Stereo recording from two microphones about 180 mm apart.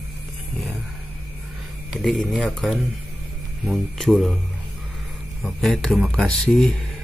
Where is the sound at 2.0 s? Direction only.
Centre (ahead or behind).